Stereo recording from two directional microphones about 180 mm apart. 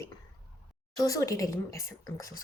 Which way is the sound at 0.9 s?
20° left (ahead or behind).